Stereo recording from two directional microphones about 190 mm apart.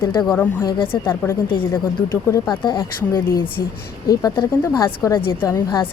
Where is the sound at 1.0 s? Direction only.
10° left (ahead or behind).